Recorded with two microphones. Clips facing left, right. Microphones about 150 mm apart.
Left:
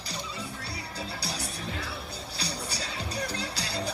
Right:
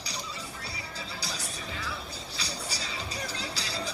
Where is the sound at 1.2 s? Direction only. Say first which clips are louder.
Left 3 dB; 65° left (ahead or behind).